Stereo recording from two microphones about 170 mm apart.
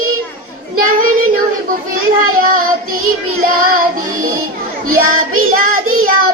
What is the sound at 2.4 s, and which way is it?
Child singing, 55° right (ahead or behind).